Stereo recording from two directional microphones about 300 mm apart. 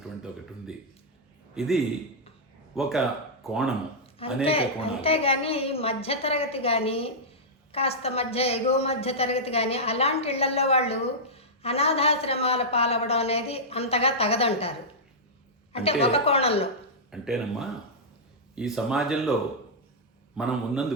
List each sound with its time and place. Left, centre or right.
1.5 s speech: centre
4.4 s a woman's voice: centre
15.7 s a woman's voice: centre
17.1 s speech: centre
20.3 s speech: centre